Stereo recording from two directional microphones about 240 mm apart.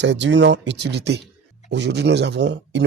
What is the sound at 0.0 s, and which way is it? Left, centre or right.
Speech, right.